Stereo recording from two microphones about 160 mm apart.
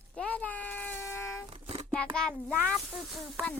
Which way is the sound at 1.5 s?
35° right (ahead or behind).